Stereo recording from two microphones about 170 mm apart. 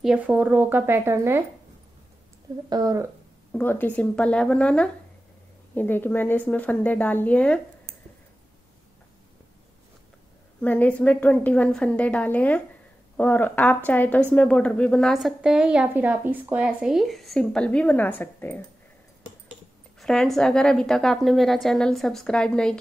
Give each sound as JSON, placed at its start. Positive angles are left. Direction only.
{"t": 0.0, "sound": "speech", "side_deg": -5}
{"t": 2.7, "sound": "speech", "side_deg": -20}
{"t": 3.5, "sound": "a woman's voice", "side_deg": 10}
{"t": 10.6, "sound": "a woman's voice", "side_deg": 10}
{"t": 20.0, "sound": "a woman's voice", "side_deg": 0}